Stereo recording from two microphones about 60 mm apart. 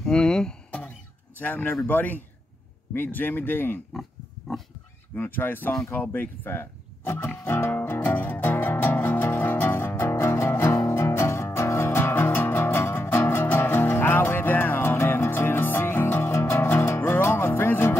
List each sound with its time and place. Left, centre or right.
0.0 s a sound: centre
0.7 s music: centre
1.4 s a man's voice: left
5.1 s speech: left
7.4 s music: left